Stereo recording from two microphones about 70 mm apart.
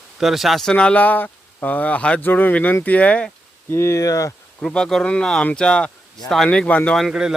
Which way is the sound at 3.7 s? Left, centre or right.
Left.